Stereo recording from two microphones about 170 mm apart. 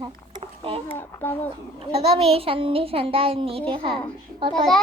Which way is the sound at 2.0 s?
35° right (ahead or behind).